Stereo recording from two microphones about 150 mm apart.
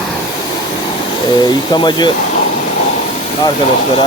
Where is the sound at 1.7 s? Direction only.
30° left (ahead or behind).